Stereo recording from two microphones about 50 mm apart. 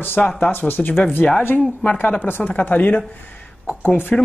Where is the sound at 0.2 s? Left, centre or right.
Centre.